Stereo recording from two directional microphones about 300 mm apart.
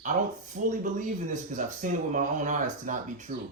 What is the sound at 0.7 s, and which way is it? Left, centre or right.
Speech, right.